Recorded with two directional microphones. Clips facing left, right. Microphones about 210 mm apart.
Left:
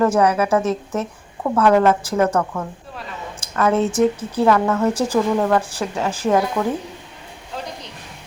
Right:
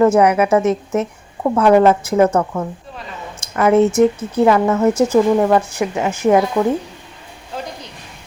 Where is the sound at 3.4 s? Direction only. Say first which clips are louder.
Right 5 dB; 15° right (ahead or behind).